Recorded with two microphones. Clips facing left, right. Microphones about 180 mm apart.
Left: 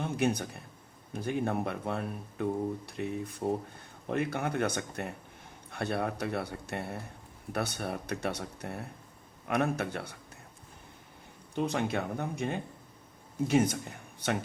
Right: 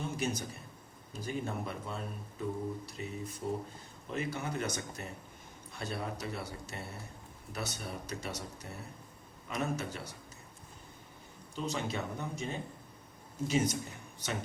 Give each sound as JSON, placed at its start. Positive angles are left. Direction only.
{"t": 0.0, "sound": "a sound", "side_deg": 60}
{"t": 1.1, "sound": "speech", "side_deg": 60}
{"t": 11.5, "sound": "speech", "side_deg": 55}